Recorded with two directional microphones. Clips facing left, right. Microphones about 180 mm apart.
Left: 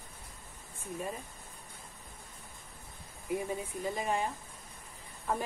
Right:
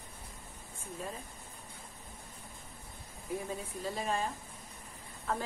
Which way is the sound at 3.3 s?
15° left (ahead or behind).